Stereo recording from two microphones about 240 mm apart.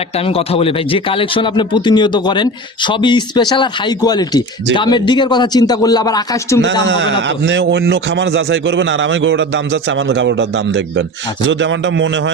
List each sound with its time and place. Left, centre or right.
0.2 s speech: left
6.8 s a man's voice: right